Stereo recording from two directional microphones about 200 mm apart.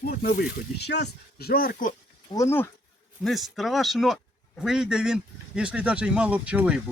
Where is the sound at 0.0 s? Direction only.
45° left (ahead or behind).